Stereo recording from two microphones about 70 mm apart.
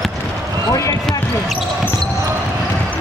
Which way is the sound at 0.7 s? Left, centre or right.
Left.